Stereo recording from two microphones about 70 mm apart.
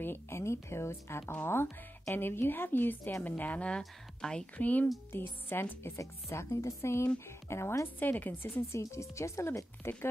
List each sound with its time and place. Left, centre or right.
0.0 s speech: left
1.2 s speech: left
1.5 s a woman's voice: left; by 4.5 s centre
4.6 s a woman's voice: left
5.9 s a woman's voice: left
8.7 s speech: left